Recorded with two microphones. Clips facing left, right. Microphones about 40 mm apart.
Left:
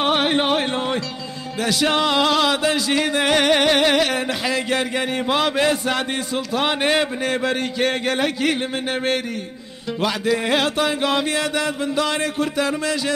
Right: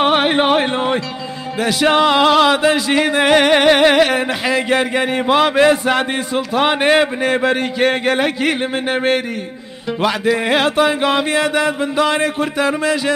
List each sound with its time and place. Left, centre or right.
0.0 s music: right